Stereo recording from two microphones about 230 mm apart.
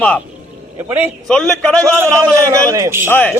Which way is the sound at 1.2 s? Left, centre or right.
Centre.